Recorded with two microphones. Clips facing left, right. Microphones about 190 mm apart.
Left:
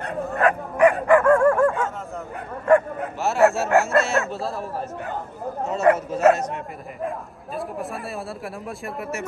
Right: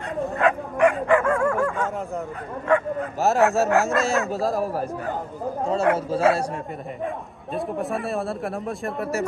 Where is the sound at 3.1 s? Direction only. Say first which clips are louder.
Even; 40° right (ahead or behind).